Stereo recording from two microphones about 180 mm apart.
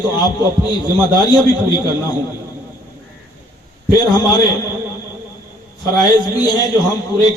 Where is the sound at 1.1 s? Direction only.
25° left (ahead or behind).